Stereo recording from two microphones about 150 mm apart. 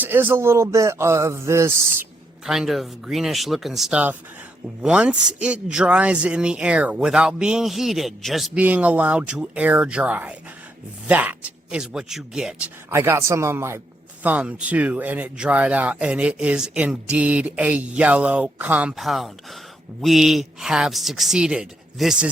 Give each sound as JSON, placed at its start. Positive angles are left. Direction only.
{"t": 0.0, "sound": "a man's voice", "side_deg": -15}
{"t": 2.5, "sound": "a man's voice", "side_deg": 0}
{"t": 12.9, "sound": "a man's voice", "side_deg": -15}